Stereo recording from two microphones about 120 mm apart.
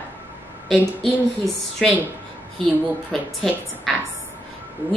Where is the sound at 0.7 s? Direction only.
Centre (ahead or behind).